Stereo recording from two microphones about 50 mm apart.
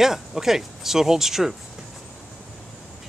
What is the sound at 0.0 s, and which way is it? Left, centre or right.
Speech, centre.